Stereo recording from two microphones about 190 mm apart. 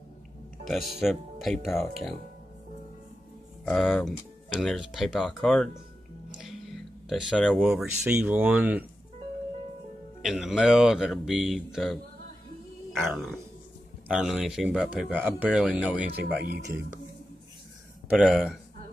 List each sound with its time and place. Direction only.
1.0 s speech: 5° left (ahead or behind)
3.6 s speech: 5° left (ahead or behind)
6.4 s a sound: centre (ahead or behind)
7.8 s speech: 5° right (ahead or behind)
10.2 s speech: 5° right (ahead or behind)
16.1 s speech: 55° right (ahead or behind)
18.0 s speech: 5° right (ahead or behind)